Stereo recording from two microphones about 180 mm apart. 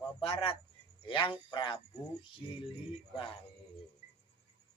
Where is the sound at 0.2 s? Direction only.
30° left (ahead or behind).